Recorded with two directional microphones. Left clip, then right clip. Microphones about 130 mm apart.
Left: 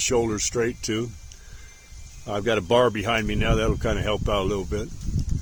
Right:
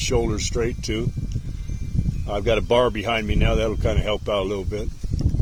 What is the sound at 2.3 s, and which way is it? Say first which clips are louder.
Speech: right 2 dB; 20° left (ahead or behind).